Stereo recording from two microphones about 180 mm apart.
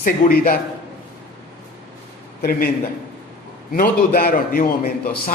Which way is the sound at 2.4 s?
55° left (ahead or behind).